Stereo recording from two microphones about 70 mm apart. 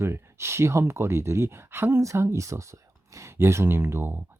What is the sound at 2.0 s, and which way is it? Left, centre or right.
Speech, right.